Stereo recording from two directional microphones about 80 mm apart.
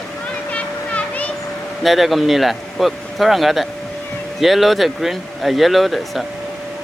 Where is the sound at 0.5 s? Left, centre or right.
Centre.